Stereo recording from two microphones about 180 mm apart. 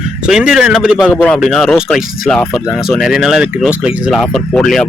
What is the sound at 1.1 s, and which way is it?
Speech, 5° left (ahead or behind).